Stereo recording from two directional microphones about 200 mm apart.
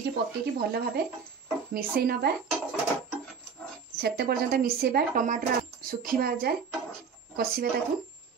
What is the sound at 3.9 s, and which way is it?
Speech, 55° right (ahead or behind).